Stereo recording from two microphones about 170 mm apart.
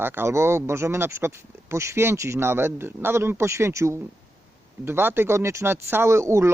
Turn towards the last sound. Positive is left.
turn(degrees=-15)  # may be behind; listen again after turning